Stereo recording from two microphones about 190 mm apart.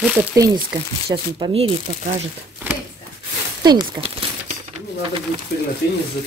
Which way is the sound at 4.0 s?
25° right (ahead or behind).